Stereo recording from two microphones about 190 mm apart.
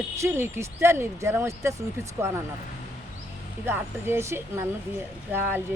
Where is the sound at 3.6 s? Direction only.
10° right (ahead or behind).